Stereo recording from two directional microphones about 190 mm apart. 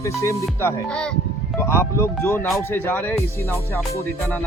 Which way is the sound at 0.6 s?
5° left (ahead or behind).